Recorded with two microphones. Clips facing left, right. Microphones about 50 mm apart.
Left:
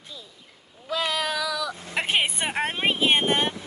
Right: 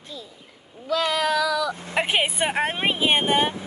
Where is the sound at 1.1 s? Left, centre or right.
Centre.